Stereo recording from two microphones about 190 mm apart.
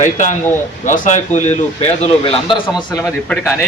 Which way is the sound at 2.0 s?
25° left (ahead or behind).